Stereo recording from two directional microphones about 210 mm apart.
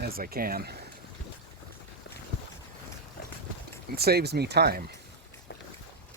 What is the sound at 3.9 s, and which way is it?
Speech, 50° right (ahead or behind).